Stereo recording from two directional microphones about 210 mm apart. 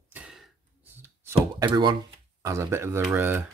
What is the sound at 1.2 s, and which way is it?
Speech, 20° right (ahead or behind).